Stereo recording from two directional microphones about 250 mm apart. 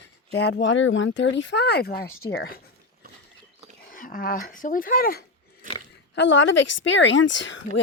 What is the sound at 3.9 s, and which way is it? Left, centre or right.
Speech, left.